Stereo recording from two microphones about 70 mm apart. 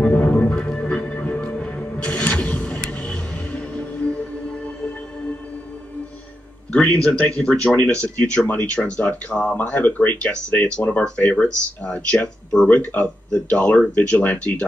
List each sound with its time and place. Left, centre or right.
0.0 s music: left
6.7 s speech: centre
9.6 s speech: left